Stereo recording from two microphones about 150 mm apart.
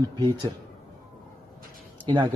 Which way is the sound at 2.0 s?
30° right (ahead or behind).